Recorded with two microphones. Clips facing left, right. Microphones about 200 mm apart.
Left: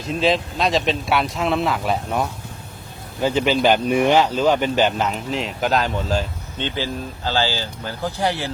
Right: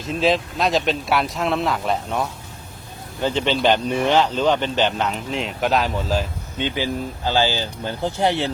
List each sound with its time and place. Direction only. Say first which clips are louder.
0.0 s speech: even; centre (ahead or behind)
6.6 s speech: right 2 dB; 15° right (ahead or behind)